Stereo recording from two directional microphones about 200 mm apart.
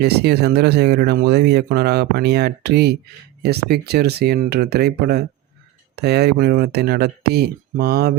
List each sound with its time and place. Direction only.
0.0 s speech: 55° right (ahead or behind)